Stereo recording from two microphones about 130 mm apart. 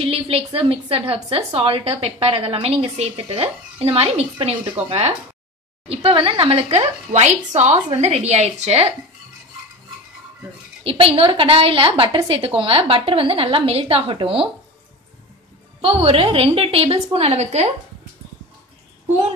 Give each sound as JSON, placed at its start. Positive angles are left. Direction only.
{"t": 0.0, "sound": "a woman's voice", "side_deg": -50}
{"t": 10.8, "sound": "a woman's voice", "side_deg": -45}
{"t": 15.8, "sound": "a woman's voice", "side_deg": -45}